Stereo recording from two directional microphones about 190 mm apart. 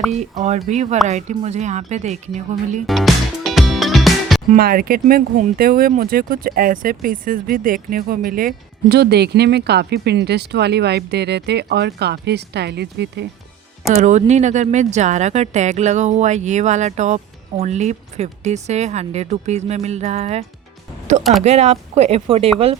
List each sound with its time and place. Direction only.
0.1 s speech: 35° right (ahead or behind)
2.8 s music: centre (ahead or behind)
4.5 s speech: 50° right (ahead or behind)
13.9 s speech: 40° right (ahead or behind)
21.4 s speech: 35° right (ahead or behind)